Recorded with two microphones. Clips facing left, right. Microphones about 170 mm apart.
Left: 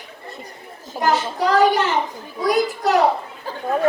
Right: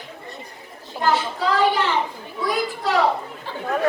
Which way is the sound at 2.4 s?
45° left (ahead or behind).